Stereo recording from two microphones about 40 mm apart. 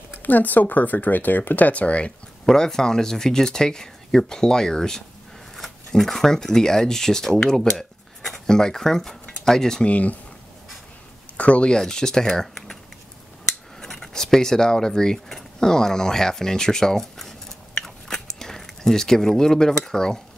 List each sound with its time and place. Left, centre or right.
0.2 s speech: left
2.4 s speech: centre
7.7 s cutlery: centre
8.5 s speech: centre
9.8 s speech: left
11.3 s speech: left
11.7 s speech: centre
13.7 s speech: centre
17.8 s a sound: centre